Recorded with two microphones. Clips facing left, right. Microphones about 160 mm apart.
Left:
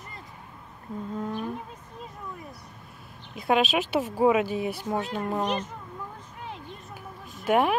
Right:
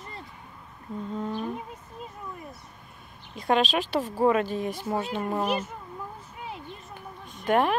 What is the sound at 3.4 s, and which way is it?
Speech, 10° left (ahead or behind).